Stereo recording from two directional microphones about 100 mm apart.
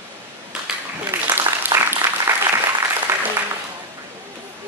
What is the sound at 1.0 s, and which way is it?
Applause, 20° right (ahead or behind).